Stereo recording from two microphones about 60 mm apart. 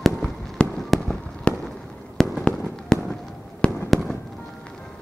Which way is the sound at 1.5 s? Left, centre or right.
Left.